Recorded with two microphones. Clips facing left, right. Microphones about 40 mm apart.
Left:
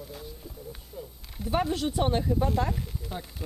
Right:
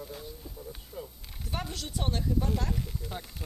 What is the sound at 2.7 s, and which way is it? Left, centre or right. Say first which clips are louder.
Speech: left 2 dB; centre.